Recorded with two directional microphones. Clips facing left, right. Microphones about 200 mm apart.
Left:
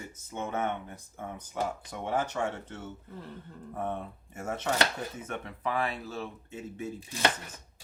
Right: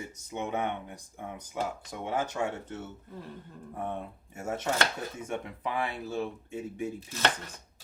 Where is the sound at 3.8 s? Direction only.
10° right (ahead or behind).